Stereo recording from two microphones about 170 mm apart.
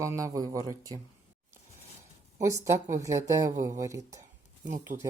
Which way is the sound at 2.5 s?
20° right (ahead or behind).